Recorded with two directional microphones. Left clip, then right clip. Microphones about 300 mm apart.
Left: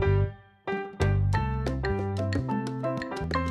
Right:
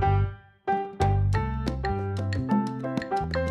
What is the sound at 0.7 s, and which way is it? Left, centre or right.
Music, centre.